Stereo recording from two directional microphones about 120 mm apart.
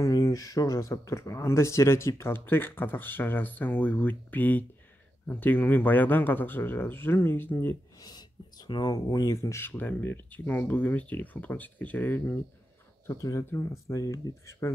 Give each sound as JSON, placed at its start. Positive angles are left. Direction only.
{"t": 0.0, "sound": "speech", "side_deg": 30}
{"t": 8.0, "sound": "speech", "side_deg": 35}
{"t": 13.0, "sound": "speech", "side_deg": 25}